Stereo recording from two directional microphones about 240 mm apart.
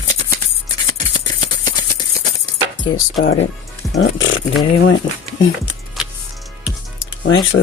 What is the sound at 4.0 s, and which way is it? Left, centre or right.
Speech, left.